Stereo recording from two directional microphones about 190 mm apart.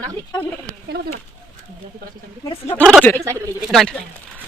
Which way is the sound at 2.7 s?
5° left (ahead or behind).